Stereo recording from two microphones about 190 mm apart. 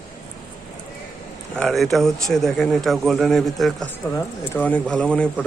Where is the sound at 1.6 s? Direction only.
Centre (ahead or behind).